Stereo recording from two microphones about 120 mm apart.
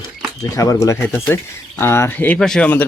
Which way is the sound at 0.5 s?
25° left (ahead or behind).